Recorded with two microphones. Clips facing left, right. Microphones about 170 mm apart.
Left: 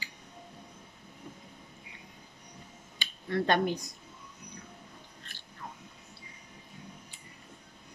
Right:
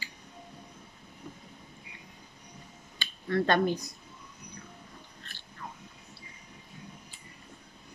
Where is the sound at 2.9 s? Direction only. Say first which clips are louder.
Right 2 dB; 15° left (ahead or behind).